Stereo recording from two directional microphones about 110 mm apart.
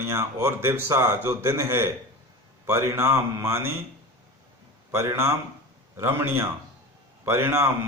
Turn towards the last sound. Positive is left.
turn(degrees=-20)  # may be behind; listen again after turning